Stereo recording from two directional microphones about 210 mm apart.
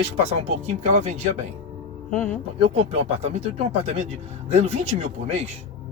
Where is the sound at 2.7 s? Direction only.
30° right (ahead or behind).